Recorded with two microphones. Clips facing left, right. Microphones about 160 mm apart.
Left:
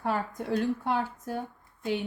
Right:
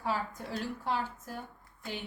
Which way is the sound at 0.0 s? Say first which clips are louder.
Left 4 dB; 55° left (ahead or behind).